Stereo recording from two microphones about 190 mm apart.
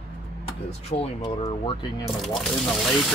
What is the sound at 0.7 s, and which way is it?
Speech, 30° left (ahead or behind).